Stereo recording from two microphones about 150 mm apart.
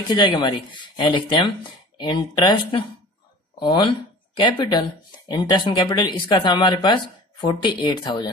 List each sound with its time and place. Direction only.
0.1 s speech: 30° left (ahead or behind)